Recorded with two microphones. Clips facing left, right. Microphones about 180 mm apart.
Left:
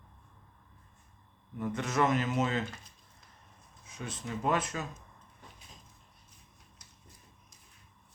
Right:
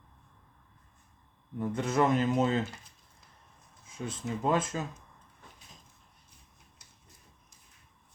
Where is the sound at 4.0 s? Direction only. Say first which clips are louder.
Right 2 dB; 20° right (ahead or behind).